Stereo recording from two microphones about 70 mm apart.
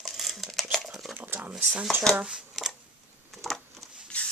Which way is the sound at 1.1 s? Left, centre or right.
Right.